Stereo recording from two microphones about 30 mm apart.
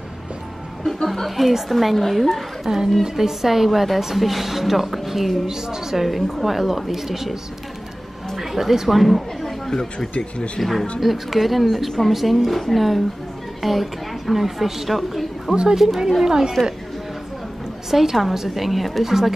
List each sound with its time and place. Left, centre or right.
1.0 s a woman's voice: centre
2.6 s a woman's voice: centre
5.5 s a woman's voice: centre
5.9 s a woman's voice: centre
8.4 s a woman's voice: centre
9.7 s speech: left
10.1 s speech: left
10.6 s a woman's voice: centre
16.3 s a woman's voice: centre
17.9 s a woman's voice: centre